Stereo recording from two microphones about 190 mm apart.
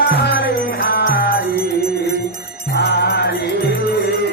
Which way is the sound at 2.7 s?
60° left (ahead or behind).